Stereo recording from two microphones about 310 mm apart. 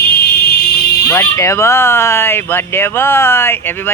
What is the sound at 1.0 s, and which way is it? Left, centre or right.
Speech, centre.